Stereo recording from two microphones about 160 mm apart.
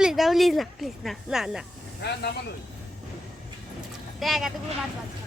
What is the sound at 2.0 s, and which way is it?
Speech, 90° left.